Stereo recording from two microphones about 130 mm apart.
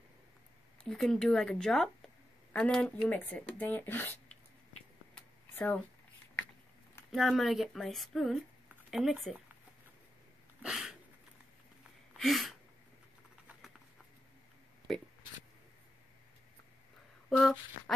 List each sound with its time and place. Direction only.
0.8 s speech: centre (ahead or behind)
5.1 s a sound: 10° left (ahead or behind)
7.1 s speech: centre (ahead or behind)
10.6 s a sound: 5° right (ahead or behind)
12.2 s speech: centre (ahead or behind)
17.4 s speech: centre (ahead or behind)